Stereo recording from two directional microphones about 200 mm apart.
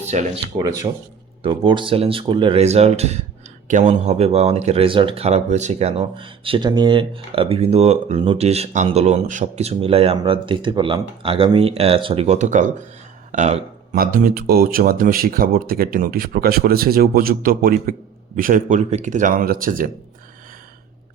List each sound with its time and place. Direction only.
0.1 s speech: 35° right (ahead or behind)
0.6 s speech: 15° right (ahead or behind); by 5.9 s 35° right (ahead or behind)
5.9 s speech: 25° right (ahead or behind); by 19.9 s 45° right (ahead or behind)